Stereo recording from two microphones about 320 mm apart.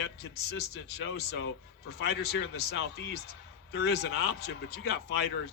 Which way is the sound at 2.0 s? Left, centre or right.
Left.